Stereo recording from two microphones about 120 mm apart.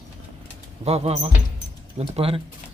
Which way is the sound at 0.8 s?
60° right (ahead or behind).